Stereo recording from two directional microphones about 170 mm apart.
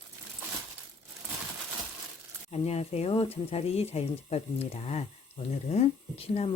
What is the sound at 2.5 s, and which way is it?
Speech, 35° left (ahead or behind).